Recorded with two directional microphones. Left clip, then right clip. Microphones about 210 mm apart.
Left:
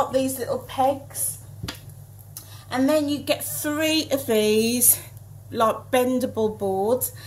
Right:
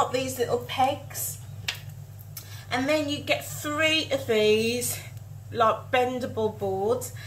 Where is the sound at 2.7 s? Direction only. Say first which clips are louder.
Left 4 dB; 35° left (ahead or behind).